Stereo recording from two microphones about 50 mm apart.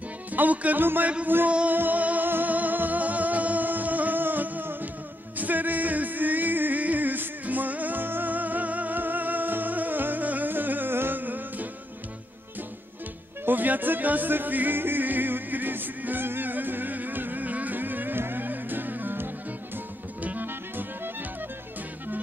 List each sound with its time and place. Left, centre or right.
0.3 s music: right
1.0 s a man's voice: right
1.7 s music: right
13.5 s music: right